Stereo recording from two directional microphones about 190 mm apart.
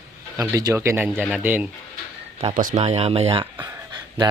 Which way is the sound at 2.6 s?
40° right (ahead or behind).